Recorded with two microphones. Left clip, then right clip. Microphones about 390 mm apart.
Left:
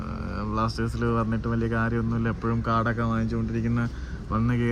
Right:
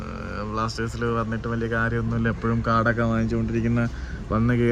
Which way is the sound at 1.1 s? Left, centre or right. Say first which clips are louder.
Right 1 dB; right.